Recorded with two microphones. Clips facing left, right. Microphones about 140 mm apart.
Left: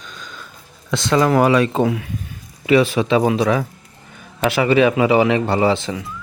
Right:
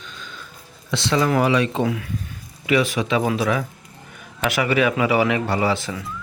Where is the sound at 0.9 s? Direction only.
45° left (ahead or behind).